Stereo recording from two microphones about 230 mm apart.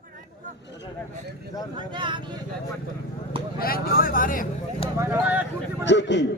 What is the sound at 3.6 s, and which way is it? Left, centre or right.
Speech, left.